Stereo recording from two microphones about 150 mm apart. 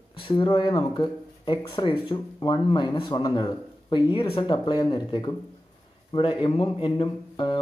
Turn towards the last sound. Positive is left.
turn(degrees=35)  # may be behind; listen again after turning